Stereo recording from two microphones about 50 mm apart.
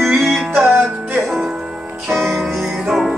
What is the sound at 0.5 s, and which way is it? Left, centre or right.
Music, right.